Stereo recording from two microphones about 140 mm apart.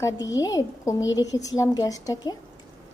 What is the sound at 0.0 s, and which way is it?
A woman's voice, 25° left (ahead or behind).